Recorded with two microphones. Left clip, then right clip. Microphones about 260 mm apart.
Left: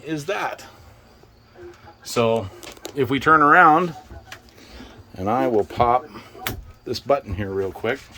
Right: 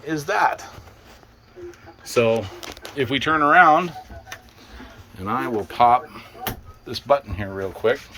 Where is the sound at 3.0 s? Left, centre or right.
Centre.